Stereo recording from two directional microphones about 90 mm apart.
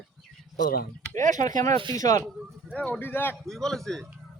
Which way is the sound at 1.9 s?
40° left (ahead or behind).